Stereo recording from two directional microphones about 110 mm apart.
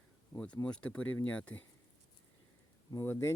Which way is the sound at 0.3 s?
10° left (ahead or behind).